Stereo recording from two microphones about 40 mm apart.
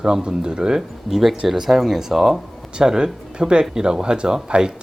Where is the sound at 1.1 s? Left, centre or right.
Centre.